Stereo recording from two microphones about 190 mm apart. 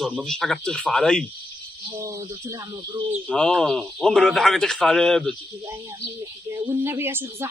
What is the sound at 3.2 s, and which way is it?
Speech, 5° left (ahead or behind).